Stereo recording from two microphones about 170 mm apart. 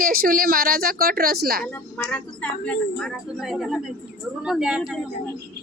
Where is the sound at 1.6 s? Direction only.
10° left (ahead or behind).